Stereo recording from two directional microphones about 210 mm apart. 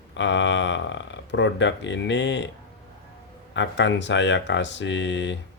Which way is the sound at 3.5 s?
60° left (ahead or behind).